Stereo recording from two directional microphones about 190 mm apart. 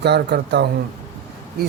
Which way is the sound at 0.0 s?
60° right (ahead or behind).